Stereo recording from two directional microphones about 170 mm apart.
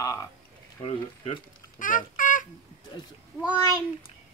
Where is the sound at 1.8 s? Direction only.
50° left (ahead or behind).